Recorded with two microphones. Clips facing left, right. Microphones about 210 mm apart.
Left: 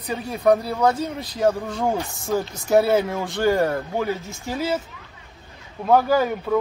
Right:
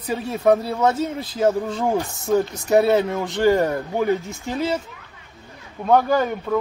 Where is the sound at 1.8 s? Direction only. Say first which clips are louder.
Right 2 dB; centre (ahead or behind).